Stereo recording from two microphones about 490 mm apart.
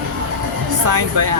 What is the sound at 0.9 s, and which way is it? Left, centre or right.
Speech, right.